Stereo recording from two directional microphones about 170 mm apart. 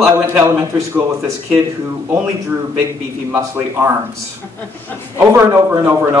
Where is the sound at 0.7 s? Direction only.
20° right (ahead or behind).